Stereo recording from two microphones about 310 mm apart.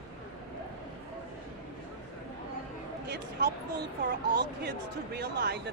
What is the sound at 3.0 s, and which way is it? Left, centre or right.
Speech, right.